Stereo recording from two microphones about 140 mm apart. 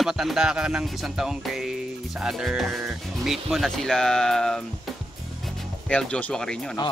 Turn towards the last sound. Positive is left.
turn(degrees=5)  # may be behind; listen again after turning